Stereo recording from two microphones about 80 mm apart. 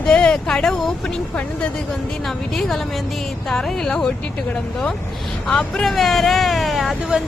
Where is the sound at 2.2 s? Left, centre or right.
Centre.